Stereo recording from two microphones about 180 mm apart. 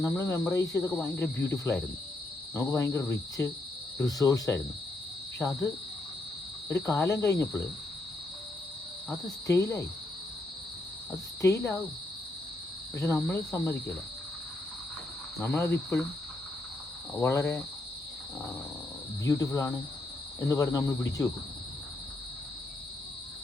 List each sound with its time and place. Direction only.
0.1 s a man's voice: 10° left (ahead or behind)
6.8 s speech: 15° left (ahead or behind)
9.0 s speech: 20° left (ahead or behind)
11.1 s speech: 15° left (ahead or behind)
13.0 s speech: 15° left (ahead or behind)
15.4 s speech: 15° left (ahead or behind)
17.2 s speech: 15° left (ahead or behind)
19.2 s a man's voice: 20° left (ahead or behind)